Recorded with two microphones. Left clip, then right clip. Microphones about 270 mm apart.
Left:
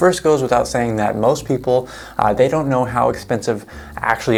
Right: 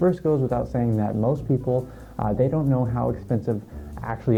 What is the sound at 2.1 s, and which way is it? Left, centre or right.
Speech, centre.